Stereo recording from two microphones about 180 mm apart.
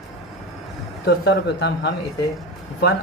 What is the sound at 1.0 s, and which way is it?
Speech, 65° left (ahead or behind).